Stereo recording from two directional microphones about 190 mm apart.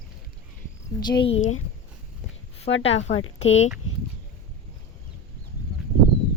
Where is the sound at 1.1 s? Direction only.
30° left (ahead or behind).